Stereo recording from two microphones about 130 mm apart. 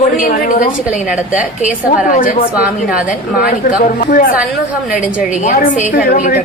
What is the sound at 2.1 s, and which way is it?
A woman's voice, 90° left.